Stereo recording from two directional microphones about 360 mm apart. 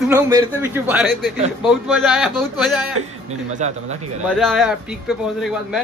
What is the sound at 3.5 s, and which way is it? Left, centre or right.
Speech, centre.